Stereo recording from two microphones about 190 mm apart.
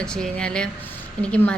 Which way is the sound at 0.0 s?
5° left (ahead or behind).